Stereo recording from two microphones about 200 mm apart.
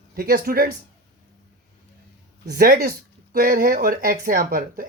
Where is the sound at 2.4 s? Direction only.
50° right (ahead or behind).